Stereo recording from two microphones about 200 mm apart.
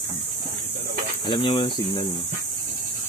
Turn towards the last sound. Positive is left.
turn(degrees=25)  # may be behind; listen again after turning